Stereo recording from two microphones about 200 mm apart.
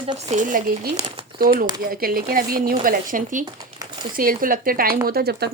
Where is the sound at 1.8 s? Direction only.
50° right (ahead or behind).